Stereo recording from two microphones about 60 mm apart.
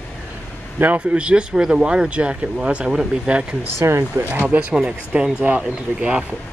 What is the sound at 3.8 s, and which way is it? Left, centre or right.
Speech, right.